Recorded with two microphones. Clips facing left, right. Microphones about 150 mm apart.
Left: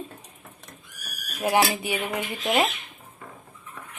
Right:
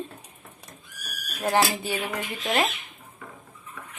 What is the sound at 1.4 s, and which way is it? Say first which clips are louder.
Speech: left 1 dB; 15° left (ahead or behind).